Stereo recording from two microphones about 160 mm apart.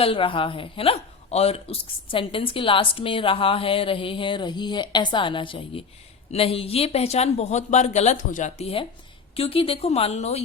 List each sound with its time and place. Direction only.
0.0 s speech: 35° left (ahead or behind)